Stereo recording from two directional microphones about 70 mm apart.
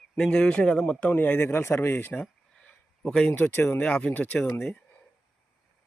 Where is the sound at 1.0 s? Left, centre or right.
Left.